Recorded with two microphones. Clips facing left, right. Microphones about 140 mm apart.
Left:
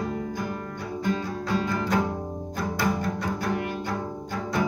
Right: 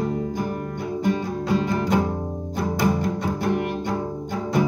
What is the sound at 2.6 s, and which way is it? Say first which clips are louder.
Cello: right 4 dB; 20° right (ahead or behind).